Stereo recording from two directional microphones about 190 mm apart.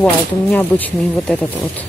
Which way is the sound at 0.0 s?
5° left (ahead or behind).